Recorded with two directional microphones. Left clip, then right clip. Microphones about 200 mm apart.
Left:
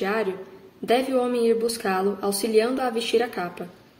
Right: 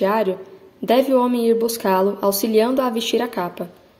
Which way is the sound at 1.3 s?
30° right (ahead or behind).